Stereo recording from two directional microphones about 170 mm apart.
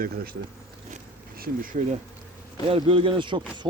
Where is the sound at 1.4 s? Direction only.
55° right (ahead or behind).